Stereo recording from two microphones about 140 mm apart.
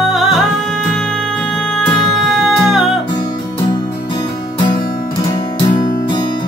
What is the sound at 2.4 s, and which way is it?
Music, centre (ahead or behind).